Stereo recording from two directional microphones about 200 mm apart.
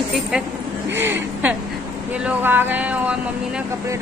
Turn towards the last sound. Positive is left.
turn(degrees=-5)  # may be behind; listen again after turning